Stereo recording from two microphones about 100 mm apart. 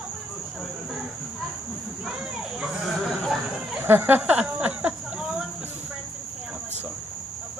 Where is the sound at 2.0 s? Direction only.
5° right (ahead or behind).